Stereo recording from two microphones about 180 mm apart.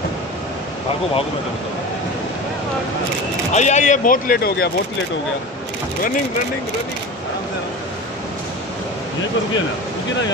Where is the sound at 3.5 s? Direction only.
40° left (ahead or behind); by 4.6 s 60° left (ahead or behind).